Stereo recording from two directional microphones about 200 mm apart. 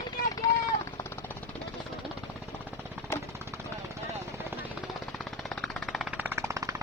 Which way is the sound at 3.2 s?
15° right (ahead or behind).